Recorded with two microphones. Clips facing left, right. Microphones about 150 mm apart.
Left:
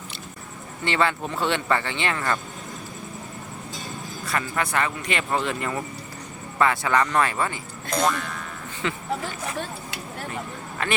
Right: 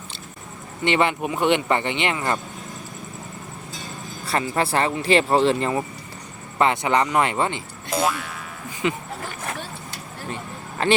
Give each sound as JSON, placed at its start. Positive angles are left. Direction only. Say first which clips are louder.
{"t": 0.9, "sound": "speech", "louder": "right 3 dB", "side_deg": -20}
{"t": 4.3, "sound": "speech", "louder": "right 4 dB", "side_deg": -30}
{"t": 7.9, "sound": "speech", "louder": "even", "side_deg": -5}
{"t": 8.8, "sound": "speech", "louder": "right 5 dB", "side_deg": -15}
{"t": 10.8, "sound": "speech", "louder": "right 7 dB", "side_deg": -30}